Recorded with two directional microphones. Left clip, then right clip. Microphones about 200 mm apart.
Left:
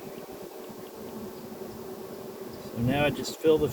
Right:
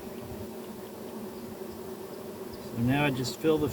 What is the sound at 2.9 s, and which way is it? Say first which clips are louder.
Speech: left 2 dB; 40° left (ahead or behind).